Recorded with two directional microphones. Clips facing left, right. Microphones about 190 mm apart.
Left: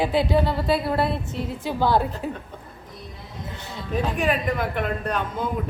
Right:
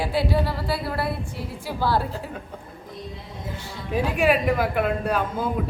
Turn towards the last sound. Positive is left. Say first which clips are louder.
# right 2 dB
turn(degrees=-5)  # may be behind; listen again after turning